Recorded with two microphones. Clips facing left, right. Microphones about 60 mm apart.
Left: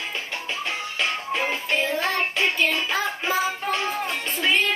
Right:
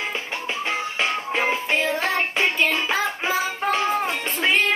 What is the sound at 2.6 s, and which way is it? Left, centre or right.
Child singing, centre.